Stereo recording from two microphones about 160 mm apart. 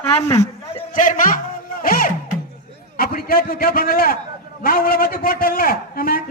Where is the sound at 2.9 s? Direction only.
65° left (ahead or behind).